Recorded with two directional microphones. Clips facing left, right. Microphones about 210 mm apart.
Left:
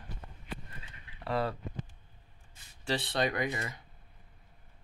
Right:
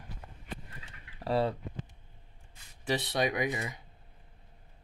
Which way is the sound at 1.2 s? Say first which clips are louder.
Right 3 dB; 30° right (ahead or behind).